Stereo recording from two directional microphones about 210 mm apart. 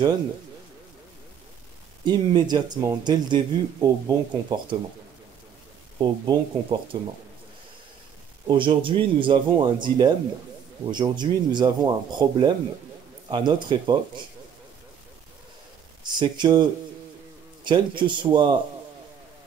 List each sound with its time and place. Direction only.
2.0 s speech: 20° right (ahead or behind)
5.9 s speech: 20° right (ahead or behind)
8.5 s speech: 25° right (ahead or behind)
16.0 s speech: 20° right (ahead or behind)
17.6 s speech: 20° right (ahead or behind)